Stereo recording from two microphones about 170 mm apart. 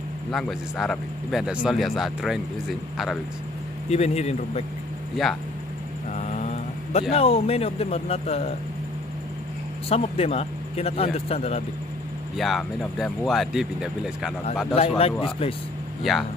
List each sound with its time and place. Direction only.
0.3 s speech: centre (ahead or behind)
3.9 s speech: 40° left (ahead or behind)
5.1 s speech: centre (ahead or behind)
6.1 s speech: 45° left (ahead or behind)
9.8 s speech: 35° left (ahead or behind)
12.4 s speech: centre (ahead or behind)
14.8 s speech: 35° left (ahead or behind)
16.0 s speech: centre (ahead or behind)